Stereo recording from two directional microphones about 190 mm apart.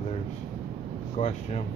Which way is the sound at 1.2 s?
35° left (ahead or behind).